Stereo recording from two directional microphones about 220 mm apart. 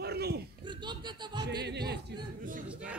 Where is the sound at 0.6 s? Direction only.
20° right (ahead or behind).